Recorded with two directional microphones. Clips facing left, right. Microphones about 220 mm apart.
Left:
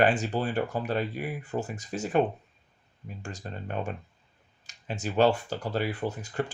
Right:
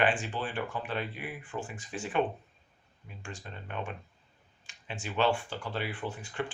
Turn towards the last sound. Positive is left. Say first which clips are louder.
# left 5 dB
turn(degrees=40)  # may be behind; listen again after turning